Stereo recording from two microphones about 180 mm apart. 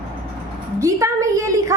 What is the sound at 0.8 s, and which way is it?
Speech, 15° right (ahead or behind).